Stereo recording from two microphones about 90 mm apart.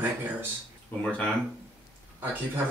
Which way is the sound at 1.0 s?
15° left (ahead or behind).